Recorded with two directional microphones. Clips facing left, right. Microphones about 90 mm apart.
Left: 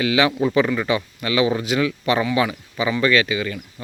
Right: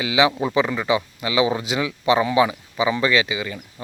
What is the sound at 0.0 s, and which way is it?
Speech, 15° right (ahead or behind).